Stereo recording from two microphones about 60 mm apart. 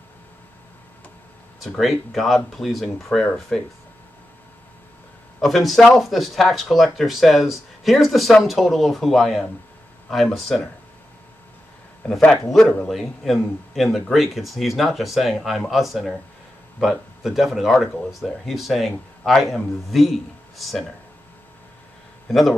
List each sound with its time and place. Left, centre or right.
1.6 s speech: centre
5.4 s speech: centre
12.0 s a man's voice: left
12.8 s speech: centre